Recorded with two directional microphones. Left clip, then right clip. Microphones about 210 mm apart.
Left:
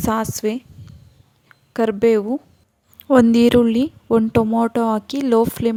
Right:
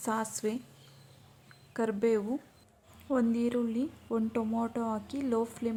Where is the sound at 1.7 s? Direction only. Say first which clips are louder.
Left 13 dB; 40° left (ahead or behind).